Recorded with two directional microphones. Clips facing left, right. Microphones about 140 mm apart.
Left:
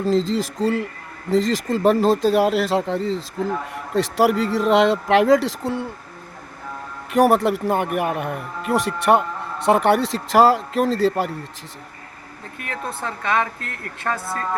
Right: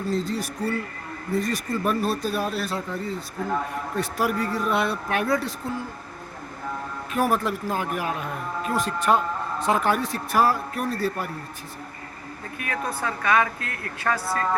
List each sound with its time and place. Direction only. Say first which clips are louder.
0.0 s speech: left 7 dB; 90° left; by 5.9 s 75° left (ahead or behind)
7.1 s a man's voice: left 8 dB; 75° left (ahead or behind); by 11.3 s 90° left
12.9 s a woman's voice: even; 25° left (ahead or behind)
14.1 s speech: even; 15° left (ahead or behind)